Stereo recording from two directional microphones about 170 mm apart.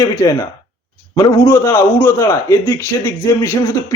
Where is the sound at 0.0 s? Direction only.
20° left (ahead or behind).